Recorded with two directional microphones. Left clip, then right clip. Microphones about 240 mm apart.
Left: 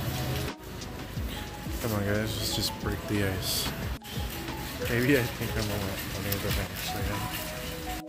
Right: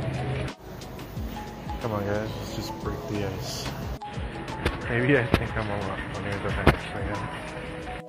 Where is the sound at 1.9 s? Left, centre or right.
Left.